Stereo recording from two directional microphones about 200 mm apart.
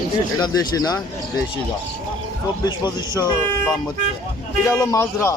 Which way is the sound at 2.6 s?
20° left (ahead or behind).